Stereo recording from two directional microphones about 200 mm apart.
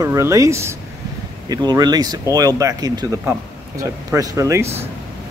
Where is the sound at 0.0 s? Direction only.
15° right (ahead or behind).